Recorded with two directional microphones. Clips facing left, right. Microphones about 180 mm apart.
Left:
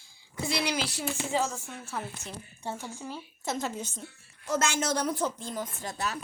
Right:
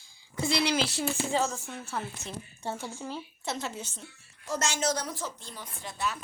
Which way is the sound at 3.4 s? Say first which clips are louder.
Left 4 dB; 45° left (ahead or behind).